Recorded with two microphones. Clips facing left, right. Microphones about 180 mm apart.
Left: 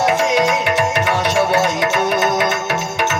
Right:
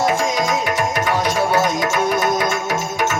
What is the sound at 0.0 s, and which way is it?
Music, 70° left (ahead or behind).